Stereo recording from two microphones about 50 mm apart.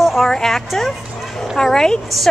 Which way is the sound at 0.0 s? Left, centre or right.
Centre.